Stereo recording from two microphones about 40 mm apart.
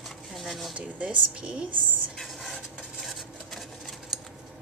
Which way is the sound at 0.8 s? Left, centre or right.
Right.